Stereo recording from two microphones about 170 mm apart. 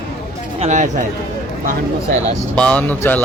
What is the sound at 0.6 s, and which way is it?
Speech, 45° right (ahead or behind).